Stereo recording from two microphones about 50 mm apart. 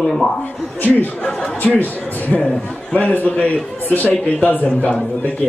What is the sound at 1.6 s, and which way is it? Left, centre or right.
Speech, left.